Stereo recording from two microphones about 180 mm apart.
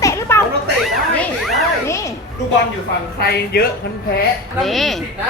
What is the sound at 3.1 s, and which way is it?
Speech, 60° left (ahead or behind).